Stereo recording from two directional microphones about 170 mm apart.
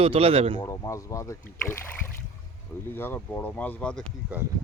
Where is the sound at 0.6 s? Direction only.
20° left (ahead or behind).